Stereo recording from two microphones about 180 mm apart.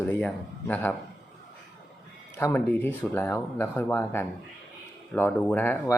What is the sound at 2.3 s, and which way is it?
Speech, 10° left (ahead or behind).